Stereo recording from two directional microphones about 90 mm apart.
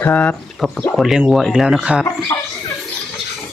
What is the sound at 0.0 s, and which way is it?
Speech, 20° left (ahead or behind).